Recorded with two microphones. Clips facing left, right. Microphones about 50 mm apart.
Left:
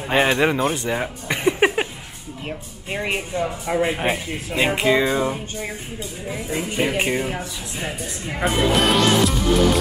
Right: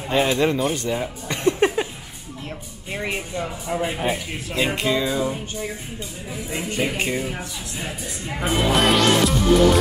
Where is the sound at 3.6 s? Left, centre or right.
Left.